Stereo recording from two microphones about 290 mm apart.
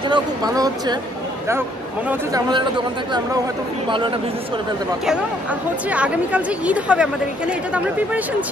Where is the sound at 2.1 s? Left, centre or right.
Centre.